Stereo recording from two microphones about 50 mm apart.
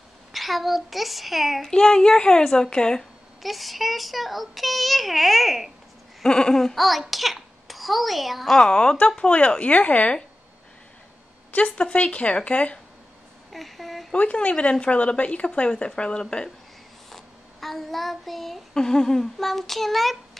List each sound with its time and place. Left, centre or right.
0.3 s a child's voice: centre
1.7 s a child's voice: centre
3.4 s a child's voice: centre
6.2 s a child's voice: centre
8.5 s a child's voice: centre
11.5 s speech: left
13.5 s a sound: centre
14.1 s speech: left
17.1 s child singing: centre